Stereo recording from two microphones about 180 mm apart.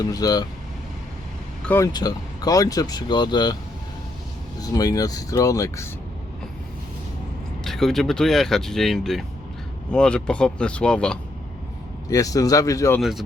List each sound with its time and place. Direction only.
0.0 s speech: 20° left (ahead or behind)
1.6 s speech: 10° left (ahead or behind)
1.9 s speech: 20° left (ahead or behind)
4.6 s speech: 20° left (ahead or behind)
7.6 s speech: centre (ahead or behind)
12.0 s speech: 20° left (ahead or behind)
13.0 s speech: centre (ahead or behind)